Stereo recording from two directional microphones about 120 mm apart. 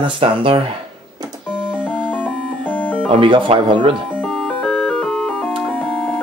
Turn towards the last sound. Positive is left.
turn(degrees=10)  # may be behind; listen again after turning